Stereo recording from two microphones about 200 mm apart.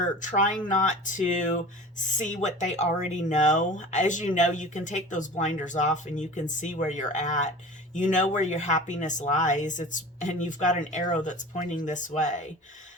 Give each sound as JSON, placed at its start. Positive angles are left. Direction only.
{"t": 0.2, "sound": "speech", "side_deg": 40}